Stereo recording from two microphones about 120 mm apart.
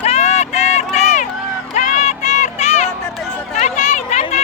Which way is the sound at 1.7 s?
90° left.